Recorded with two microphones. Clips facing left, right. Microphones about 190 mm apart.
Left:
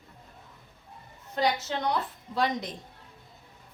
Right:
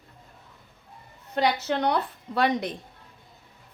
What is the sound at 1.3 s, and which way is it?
A woman's voice, 65° right (ahead or behind).